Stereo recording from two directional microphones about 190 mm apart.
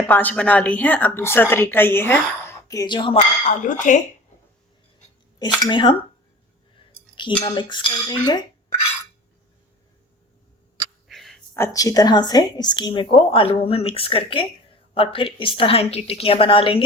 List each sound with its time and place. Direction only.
0.1 s a woman's voice: 10° left (ahead or behind); by 3.2 s 25° left (ahead or behind)
3.2 s speech: 40° left (ahead or behind)
5.4 s speech: 20° left (ahead or behind)
7.2 s speech: 25° left (ahead or behind)
11.1 s a sound: centre (ahead or behind)
11.5 s speech: 15° left (ahead or behind)